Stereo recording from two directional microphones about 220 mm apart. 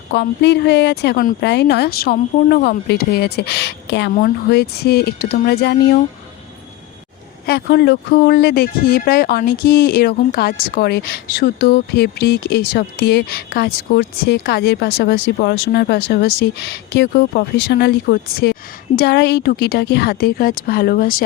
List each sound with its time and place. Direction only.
0.1 s speech: 50° left (ahead or behind)
7.4 s speech: 45° left (ahead or behind)